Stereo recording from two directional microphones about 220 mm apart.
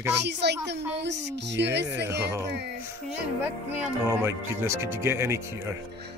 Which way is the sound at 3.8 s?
10° right (ahead or behind).